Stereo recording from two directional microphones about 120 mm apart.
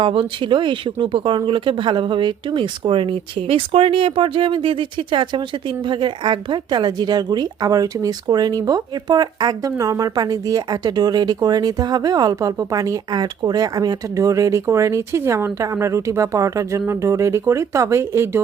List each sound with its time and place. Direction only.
0.0 s speech: 45° right (ahead or behind); by 18.3 s 20° right (ahead or behind)